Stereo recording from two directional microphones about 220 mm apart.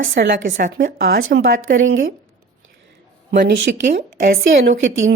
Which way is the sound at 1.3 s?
60° right (ahead or behind).